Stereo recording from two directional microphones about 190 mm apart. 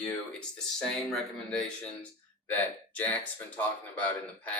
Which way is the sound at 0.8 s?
5° left (ahead or behind).